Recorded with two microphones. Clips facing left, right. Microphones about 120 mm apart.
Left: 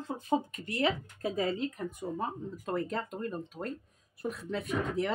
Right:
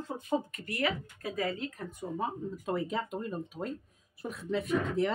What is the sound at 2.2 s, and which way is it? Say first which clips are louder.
Speech: right 1 dB; 5° right (ahead or behind).